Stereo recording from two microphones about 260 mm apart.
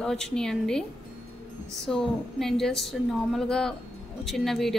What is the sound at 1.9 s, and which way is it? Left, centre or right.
A woman's voice, centre.